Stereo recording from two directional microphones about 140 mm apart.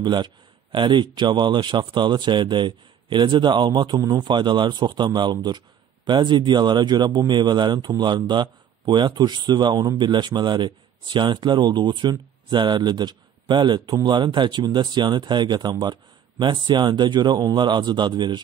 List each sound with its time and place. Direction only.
0.0 s a man's voice: 35° right (ahead or behind)